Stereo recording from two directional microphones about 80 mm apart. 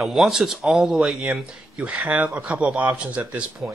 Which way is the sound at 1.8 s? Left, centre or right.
Centre.